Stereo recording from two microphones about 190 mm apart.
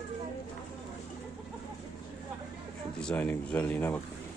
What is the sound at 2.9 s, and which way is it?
Speech, 5° left (ahead or behind).